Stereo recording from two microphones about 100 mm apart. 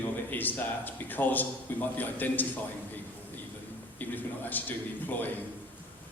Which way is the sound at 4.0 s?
20° left (ahead or behind).